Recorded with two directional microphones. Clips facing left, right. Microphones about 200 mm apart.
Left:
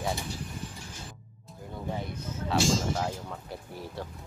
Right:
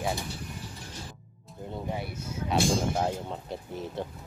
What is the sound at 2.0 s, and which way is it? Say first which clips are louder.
Speech: right 1 dB; 10° right (ahead or behind).